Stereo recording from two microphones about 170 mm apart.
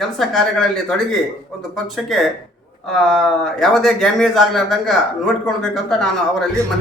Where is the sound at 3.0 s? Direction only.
Centre (ahead or behind).